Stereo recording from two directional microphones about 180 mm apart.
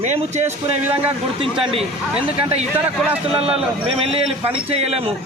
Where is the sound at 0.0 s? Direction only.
40° right (ahead or behind).